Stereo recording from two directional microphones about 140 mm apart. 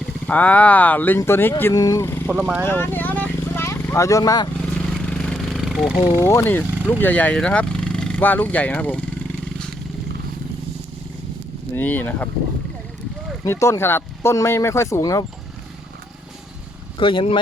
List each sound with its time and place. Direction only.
0.3 s speech: 10° left (ahead or behind)
2.3 s speech: 10° right (ahead or behind)
2.6 s a sound: 15° left (ahead or behind)
5.0 s a sound: 5° left (ahead or behind)
6.2 s speech: 15° left (ahead or behind)
11.7 s speech: 15° left (ahead or behind)
13.4 s speech: 20° left (ahead or behind)
17.0 s speech: 40° left (ahead or behind)